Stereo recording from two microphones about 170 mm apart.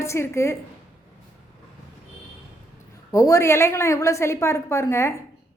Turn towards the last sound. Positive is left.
turn(degrees=15)  # may be behind; listen again after turning